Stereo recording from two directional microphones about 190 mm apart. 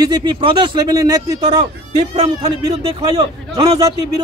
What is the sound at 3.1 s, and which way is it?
Speech, 20° right (ahead or behind).